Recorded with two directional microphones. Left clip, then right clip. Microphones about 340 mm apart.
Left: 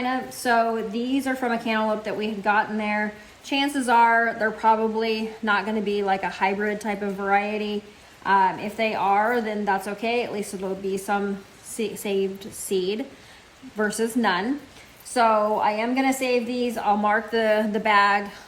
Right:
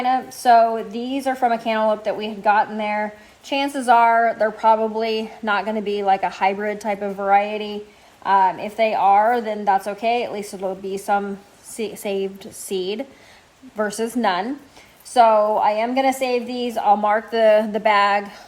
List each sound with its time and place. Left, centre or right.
0.0 s a woman's voice: centre